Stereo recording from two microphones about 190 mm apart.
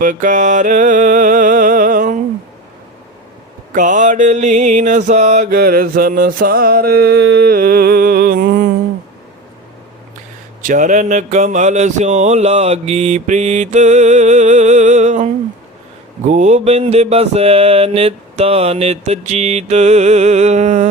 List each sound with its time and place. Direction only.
0.0 s music: 45° right (ahead or behind)
3.8 s mantra: 40° right (ahead or behind)
10.6 s a sound: 45° right (ahead or behind)